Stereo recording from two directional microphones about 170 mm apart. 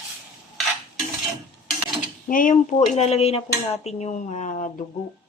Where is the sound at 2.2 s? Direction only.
50° left (ahead or behind).